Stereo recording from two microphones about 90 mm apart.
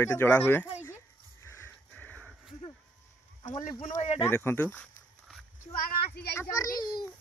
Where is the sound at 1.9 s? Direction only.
15° left (ahead or behind).